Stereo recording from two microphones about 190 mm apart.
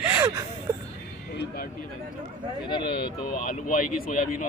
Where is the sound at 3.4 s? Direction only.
45° left (ahead or behind).